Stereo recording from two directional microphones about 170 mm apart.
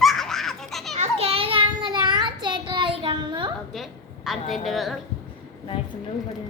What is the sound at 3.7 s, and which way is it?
A woman's voice, centre (ahead or behind).